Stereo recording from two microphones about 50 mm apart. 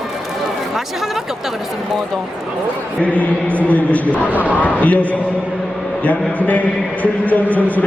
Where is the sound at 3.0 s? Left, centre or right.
Left.